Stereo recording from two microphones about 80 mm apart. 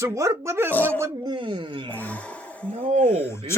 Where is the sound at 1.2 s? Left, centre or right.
Right.